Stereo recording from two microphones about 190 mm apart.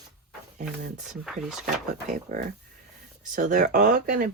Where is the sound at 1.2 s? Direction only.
Centre (ahead or behind).